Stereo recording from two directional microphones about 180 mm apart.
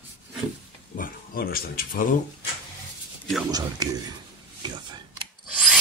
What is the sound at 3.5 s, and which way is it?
Speech, 20° right (ahead or behind).